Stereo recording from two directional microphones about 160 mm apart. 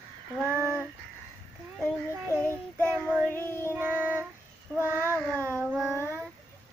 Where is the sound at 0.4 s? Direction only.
15° right (ahead or behind).